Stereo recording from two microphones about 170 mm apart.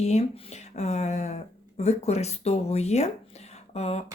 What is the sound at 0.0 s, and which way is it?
Speech, 40° left (ahead or behind).